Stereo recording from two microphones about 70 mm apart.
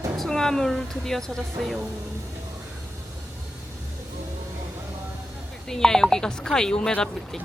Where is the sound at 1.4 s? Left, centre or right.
Centre.